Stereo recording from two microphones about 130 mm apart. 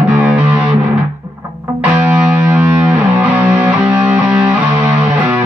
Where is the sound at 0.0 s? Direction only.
10° right (ahead or behind).